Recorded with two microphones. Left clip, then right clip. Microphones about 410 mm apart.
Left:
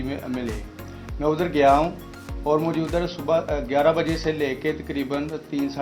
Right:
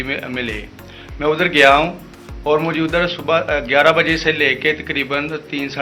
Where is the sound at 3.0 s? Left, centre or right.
Left.